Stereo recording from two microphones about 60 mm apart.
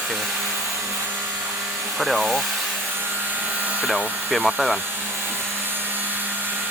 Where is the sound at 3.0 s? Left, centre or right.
Right.